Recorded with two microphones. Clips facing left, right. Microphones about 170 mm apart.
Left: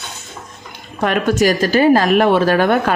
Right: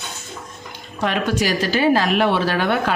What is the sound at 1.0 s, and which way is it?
Speech, 50° left (ahead or behind).